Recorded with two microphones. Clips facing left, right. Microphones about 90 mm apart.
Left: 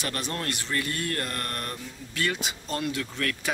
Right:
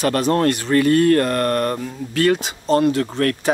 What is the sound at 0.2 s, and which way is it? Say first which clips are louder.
Speech: right 15 dB; 55° right (ahead or behind).